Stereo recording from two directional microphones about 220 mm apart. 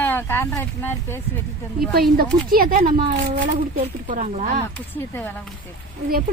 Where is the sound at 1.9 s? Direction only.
45° right (ahead or behind).